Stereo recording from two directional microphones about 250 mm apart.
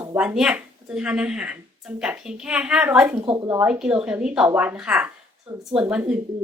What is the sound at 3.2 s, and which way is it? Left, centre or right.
Speech, centre.